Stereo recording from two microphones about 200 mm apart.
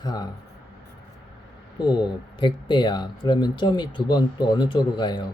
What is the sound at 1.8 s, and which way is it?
Speech, 20° left (ahead or behind).